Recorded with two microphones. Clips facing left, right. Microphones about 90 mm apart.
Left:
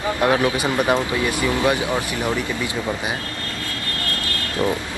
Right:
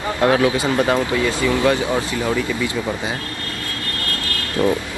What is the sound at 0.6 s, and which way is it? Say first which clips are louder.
A man's voice: right 2 dB; 20° left (ahead or behind).